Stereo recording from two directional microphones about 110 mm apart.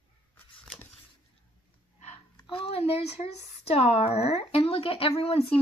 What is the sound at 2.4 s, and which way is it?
A child's voice, 60° left (ahead or behind).